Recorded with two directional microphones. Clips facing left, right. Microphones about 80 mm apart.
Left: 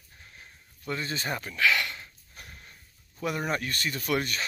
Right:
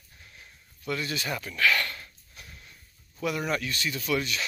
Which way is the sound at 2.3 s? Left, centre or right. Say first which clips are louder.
Left 2 dB; left.